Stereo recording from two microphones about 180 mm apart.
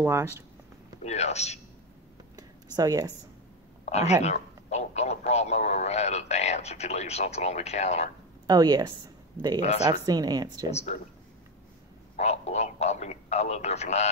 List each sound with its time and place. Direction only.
0.0 s speech: 15° right (ahead or behind)
1.0 s speech: 35° left (ahead or behind)
2.3 s a sound: 20° right (ahead or behind)
3.8 s speech: 35° left (ahead or behind)
8.5 s speech: 20° right (ahead or behind)
9.6 s speech: 35° left (ahead or behind)
10.0 s speech: 20° right (ahead or behind)
10.7 s speech: 35° left (ahead or behind)
12.2 s speech: 40° left (ahead or behind)